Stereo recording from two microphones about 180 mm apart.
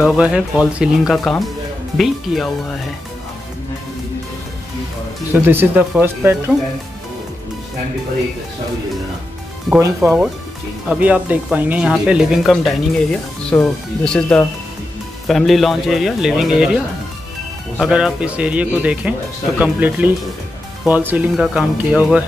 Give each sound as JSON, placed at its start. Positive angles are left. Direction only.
{"t": 0.0, "sound": "speech", "side_deg": -5}
{"t": 5.3, "sound": "speech", "side_deg": -10}
{"t": 9.8, "sound": "speech", "side_deg": -15}